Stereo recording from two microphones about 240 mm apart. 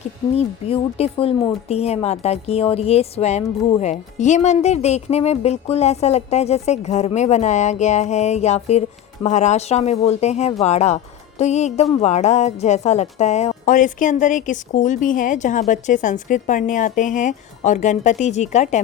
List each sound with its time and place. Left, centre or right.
0.3 s speech: left